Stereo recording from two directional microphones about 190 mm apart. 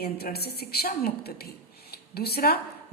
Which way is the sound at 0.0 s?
55° left (ahead or behind).